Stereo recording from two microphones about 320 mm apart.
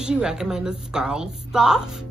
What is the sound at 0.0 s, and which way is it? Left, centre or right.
A woman's voice, centre.